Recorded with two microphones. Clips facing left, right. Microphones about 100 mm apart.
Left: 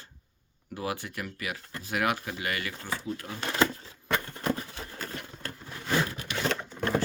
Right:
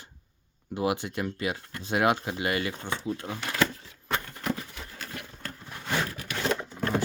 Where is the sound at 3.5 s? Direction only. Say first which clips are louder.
Left 2 dB; 30° left (ahead or behind).